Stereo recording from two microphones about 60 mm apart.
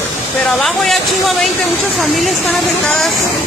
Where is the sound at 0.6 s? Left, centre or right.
Centre.